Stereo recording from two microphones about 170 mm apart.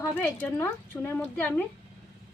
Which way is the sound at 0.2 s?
15° left (ahead or behind).